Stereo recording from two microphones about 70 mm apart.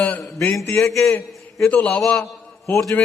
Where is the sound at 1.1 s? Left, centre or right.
Left.